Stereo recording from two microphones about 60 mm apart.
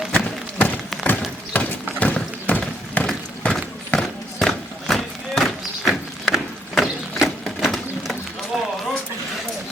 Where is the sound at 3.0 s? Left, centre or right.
Left.